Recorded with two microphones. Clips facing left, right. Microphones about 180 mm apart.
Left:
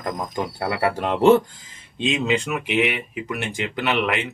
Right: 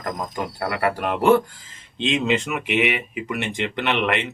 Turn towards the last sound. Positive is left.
turn(degrees=0)  # may be behind; listen again after turning